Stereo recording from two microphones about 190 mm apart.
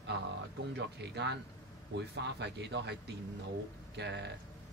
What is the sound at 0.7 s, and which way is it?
Speech, 65° right (ahead or behind).